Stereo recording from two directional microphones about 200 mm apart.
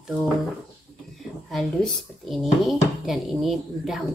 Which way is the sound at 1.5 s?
Centre (ahead or behind).